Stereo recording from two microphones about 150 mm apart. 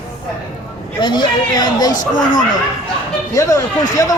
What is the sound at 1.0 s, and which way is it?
Speech, 30° left (ahead or behind).